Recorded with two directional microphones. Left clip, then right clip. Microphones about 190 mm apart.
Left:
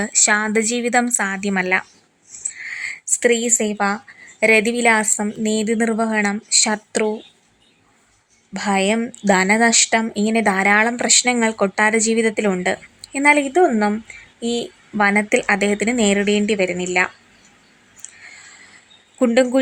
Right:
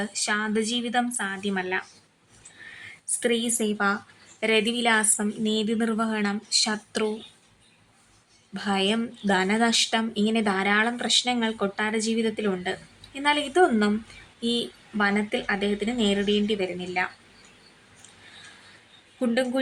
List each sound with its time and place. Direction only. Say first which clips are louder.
0.0 s speech: left 9 dB; 35° left (ahead or behind)
3.2 s a woman's voice: left 8 dB; 35° left (ahead or behind)
8.5 s speech: left 7 dB; 35° left (ahead or behind)
14.9 s speech: left 9 dB; 35° left (ahead or behind)
19.2 s speech: left 10 dB; 40° left (ahead or behind)